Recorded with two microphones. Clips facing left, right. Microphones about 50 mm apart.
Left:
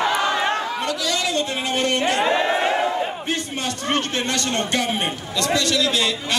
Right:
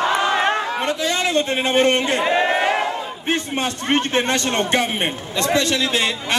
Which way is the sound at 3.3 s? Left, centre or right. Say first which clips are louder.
Right 4 dB; right.